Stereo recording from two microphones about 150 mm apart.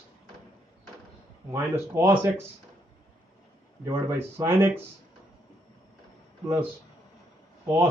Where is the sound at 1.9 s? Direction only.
15° right (ahead or behind).